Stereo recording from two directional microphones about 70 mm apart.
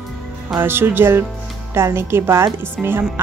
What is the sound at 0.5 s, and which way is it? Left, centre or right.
Speech, right.